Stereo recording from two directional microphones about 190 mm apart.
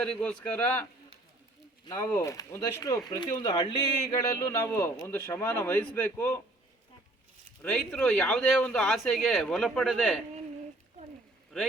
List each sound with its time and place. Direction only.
0.0 s speech: 5° left (ahead or behind)
2.1 s speech: 15° left (ahead or behind)
7.6 s speech: 5° left (ahead or behind)
11.5 s a man's voice: centre (ahead or behind)